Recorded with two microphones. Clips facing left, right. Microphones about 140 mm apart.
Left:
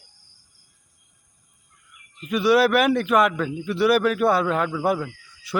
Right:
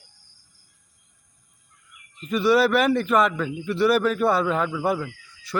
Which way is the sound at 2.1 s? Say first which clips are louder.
Left 1 dB; 5° left (ahead or behind).